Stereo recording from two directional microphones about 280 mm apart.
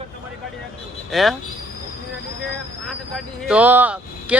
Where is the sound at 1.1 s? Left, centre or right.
Centre.